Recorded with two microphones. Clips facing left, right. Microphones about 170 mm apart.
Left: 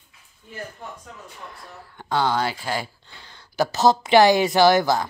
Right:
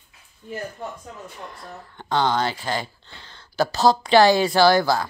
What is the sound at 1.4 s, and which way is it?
Speech, centre (ahead or behind).